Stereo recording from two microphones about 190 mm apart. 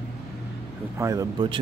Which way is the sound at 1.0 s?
15° right (ahead or behind).